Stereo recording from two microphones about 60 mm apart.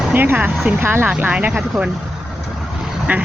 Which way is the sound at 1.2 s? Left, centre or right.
Right.